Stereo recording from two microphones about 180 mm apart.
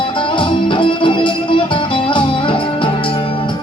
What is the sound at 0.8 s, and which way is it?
Music, 30° left (ahead or behind).